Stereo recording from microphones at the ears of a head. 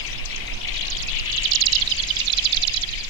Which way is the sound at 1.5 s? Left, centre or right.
Right.